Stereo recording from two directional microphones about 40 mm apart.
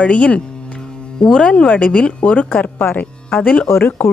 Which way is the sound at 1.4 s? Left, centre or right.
Left.